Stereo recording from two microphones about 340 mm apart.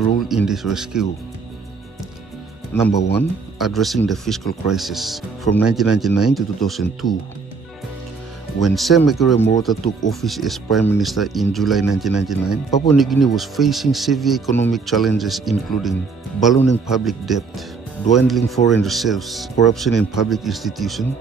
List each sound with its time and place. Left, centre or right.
0.5 s speech: centre
2.9 s speech: left
3.2 s speech: centre
8.5 s speech: centre